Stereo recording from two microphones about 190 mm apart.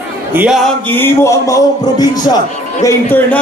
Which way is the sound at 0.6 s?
10° left (ahead or behind).